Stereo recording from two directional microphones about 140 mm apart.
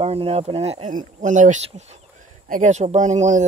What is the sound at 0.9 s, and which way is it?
Speech, 65° right (ahead or behind).